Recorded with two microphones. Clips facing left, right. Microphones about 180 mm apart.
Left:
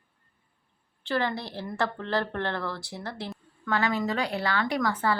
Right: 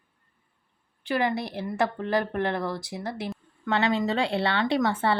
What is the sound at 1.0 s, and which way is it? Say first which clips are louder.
A woman's voice: right 3 dB; 15° right (ahead or behind).